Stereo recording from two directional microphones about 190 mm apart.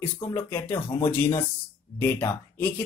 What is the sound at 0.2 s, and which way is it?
Speech, 10° left (ahead or behind).